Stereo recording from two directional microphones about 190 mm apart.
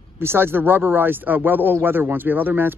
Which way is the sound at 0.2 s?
10° right (ahead or behind).